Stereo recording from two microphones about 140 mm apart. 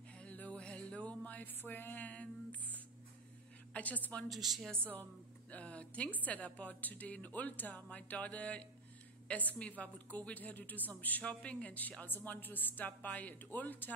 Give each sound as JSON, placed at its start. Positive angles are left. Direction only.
{"t": 0.2, "sound": "music", "side_deg": 10}
{"t": 3.7, "sound": "a woman's voice", "side_deg": 10}
{"t": 5.5, "sound": "a woman's voice", "side_deg": 10}